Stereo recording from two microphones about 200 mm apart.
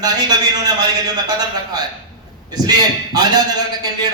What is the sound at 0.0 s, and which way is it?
Speech, 20° right (ahead or behind).